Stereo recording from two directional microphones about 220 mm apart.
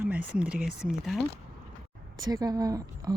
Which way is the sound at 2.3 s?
15° right (ahead or behind).